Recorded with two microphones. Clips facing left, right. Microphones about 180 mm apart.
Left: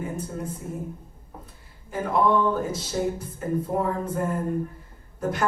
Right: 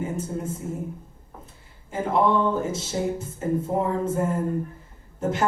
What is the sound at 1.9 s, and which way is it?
Music, 25° right (ahead or behind).